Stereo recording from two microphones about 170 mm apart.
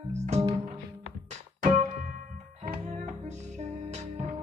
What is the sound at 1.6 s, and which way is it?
Music, 50° right (ahead or behind).